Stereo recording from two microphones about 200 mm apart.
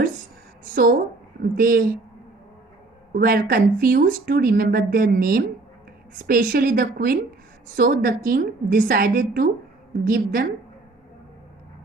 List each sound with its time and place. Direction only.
0.7 s a woman's voice: 45° right (ahead or behind)
3.1 s speech: 45° right (ahead or behind)